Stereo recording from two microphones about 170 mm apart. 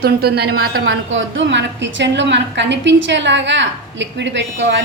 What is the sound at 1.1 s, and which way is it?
A woman's voice, 90° right.